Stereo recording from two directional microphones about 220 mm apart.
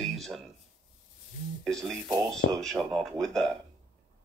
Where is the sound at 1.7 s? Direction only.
Centre (ahead or behind).